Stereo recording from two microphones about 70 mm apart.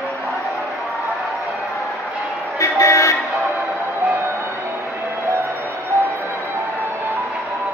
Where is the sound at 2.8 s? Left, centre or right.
Left.